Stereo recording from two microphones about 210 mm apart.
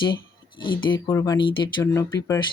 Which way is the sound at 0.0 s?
20° left (ahead or behind).